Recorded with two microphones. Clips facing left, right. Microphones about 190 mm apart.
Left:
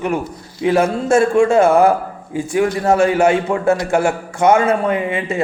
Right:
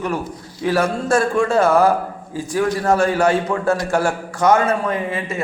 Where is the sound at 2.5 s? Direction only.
25° left (ahead or behind).